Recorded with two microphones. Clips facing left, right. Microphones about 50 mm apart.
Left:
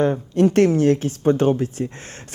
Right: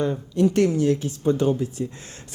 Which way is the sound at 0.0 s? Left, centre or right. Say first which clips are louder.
Left 4 dB; left.